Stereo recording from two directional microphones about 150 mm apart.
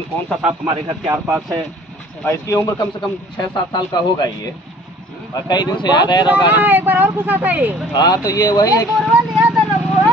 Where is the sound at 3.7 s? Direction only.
25° left (ahead or behind).